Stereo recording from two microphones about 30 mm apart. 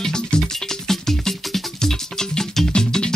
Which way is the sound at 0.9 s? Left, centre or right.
Centre.